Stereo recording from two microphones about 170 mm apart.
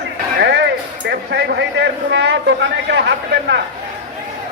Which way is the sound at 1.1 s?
90° right.